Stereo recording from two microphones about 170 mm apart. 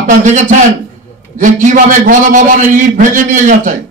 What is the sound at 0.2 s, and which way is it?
A man's voice, 45° right (ahead or behind).